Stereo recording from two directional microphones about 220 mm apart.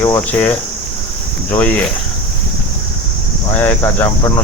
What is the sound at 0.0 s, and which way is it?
Cricket, 10° left (ahead or behind).